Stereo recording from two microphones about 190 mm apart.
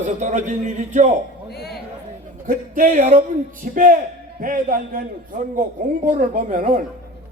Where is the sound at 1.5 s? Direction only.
55° left (ahead or behind).